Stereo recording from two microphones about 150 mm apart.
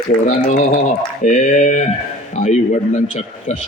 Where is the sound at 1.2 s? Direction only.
55° left (ahead or behind).